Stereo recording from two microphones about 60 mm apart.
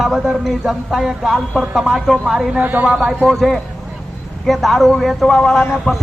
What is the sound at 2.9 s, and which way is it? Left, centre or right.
Speech, centre.